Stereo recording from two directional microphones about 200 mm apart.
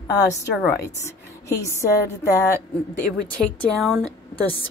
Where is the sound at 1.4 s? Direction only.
15° left (ahead or behind).